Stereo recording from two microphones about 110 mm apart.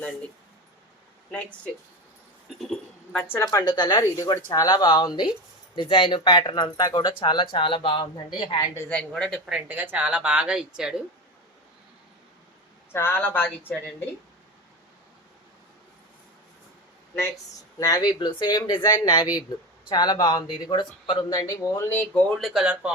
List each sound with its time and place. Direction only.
1.3 s speech: 10° left (ahead or behind)
3.3 s speech: 30° left (ahead or behind); by 8.5 s 45° left (ahead or behind)
8.9 s speech: 10° left (ahead or behind)
9.5 s a woman's voice: 15° right (ahead or behind)
12.9 s speech: 20° left (ahead or behind)
17.7 s speech: 35° left (ahead or behind)
21.3 s speech: 30° left (ahead or behind)
22.3 s speech: centre (ahead or behind)
22.6 s a woman's voice: 10° right (ahead or behind)